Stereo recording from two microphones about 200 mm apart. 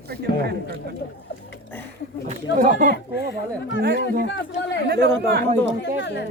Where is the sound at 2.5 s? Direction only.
40° right (ahead or behind).